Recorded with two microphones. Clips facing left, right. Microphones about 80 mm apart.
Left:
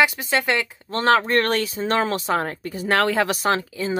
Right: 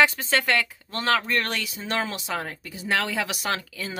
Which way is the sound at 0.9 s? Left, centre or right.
Left.